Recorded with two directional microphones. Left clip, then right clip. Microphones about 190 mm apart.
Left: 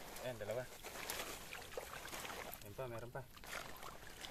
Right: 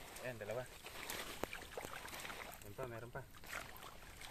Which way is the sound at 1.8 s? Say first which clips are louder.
Even; 50° left (ahead or behind).